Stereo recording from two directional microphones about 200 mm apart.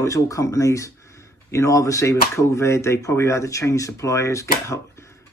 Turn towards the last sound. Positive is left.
turn(degrees=15)  # may be behind; listen again after turning